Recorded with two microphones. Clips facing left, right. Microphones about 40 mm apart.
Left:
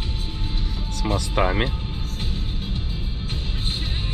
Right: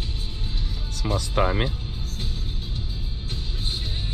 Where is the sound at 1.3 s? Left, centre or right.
Left.